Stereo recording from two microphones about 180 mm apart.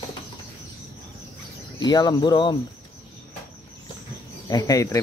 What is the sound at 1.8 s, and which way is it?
Speech, 20° left (ahead or behind).